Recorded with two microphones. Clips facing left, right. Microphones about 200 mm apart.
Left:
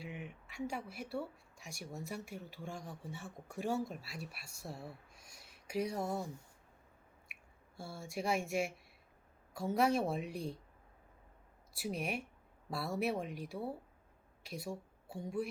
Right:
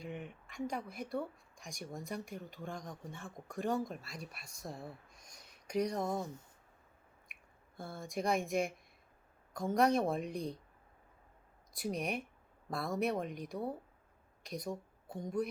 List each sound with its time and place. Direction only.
0.0 s a woman's voice: 5° left (ahead or behind)
6.1 s speech: 20° right (ahead or behind)
7.8 s a woman's voice: 10° left (ahead or behind)
11.7 s a woman's voice: 5° left (ahead or behind)